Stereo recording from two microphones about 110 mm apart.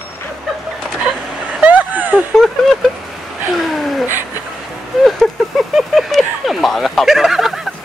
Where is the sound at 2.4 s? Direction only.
Centre (ahead or behind).